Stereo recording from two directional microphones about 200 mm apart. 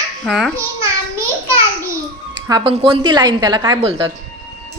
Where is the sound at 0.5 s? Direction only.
15° right (ahead or behind).